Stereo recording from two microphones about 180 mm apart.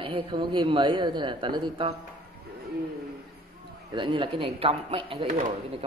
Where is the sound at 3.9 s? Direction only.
30° right (ahead or behind).